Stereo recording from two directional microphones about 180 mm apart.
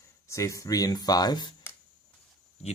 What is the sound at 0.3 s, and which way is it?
Speech, 15° left (ahead or behind).